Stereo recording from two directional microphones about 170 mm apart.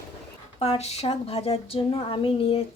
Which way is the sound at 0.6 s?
35° left (ahead or behind).